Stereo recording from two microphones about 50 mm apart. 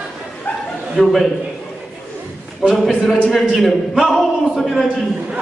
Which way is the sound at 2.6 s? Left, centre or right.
Centre.